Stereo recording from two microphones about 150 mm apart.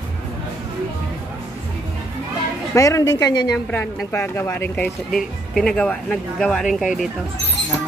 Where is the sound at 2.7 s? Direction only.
20° left (ahead or behind); by 7.1 s centre (ahead or behind).